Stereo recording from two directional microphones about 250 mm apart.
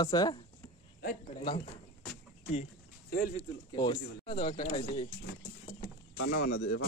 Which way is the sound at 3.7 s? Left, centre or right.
Centre.